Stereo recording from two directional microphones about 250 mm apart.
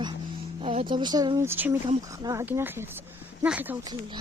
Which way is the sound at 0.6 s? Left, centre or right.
Right.